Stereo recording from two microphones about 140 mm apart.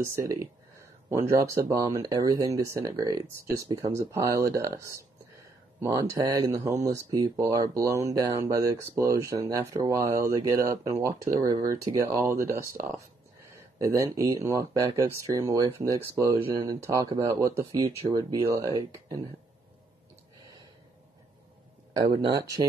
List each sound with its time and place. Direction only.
0.0 s speech: 20° right (ahead or behind)
13.7 s speech: 25° right (ahead or behind)
21.9 s speech: 30° right (ahead or behind)